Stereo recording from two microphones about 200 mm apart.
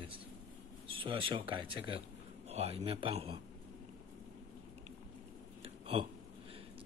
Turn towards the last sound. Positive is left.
turn(degrees=-30)  # may be behind; listen again after turning